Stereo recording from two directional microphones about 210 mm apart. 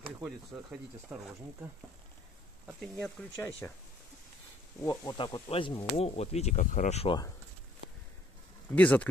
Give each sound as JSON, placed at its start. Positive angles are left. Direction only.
{"t": 0.0, "sound": "speech", "side_deg": -5}
{"t": 4.8, "sound": "speech", "side_deg": 20}
{"t": 8.7, "sound": "speech", "side_deg": 5}